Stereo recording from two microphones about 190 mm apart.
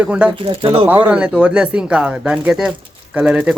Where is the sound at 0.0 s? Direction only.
5° right (ahead or behind).